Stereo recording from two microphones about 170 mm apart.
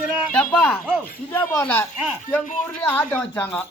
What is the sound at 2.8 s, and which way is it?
Speech, 10° left (ahead or behind).